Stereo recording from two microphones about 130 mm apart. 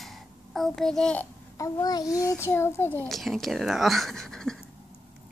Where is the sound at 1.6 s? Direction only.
30° left (ahead or behind).